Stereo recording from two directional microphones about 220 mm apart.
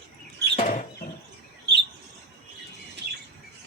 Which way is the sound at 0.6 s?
35° left (ahead or behind).